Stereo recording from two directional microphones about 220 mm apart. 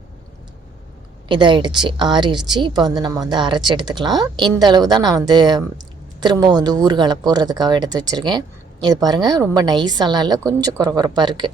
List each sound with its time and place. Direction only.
1.3 s speech: 20° right (ahead or behind)